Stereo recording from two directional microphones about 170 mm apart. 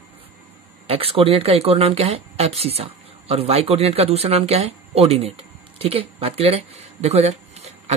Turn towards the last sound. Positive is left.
turn(degrees=-40)  # may be behind; listen again after turning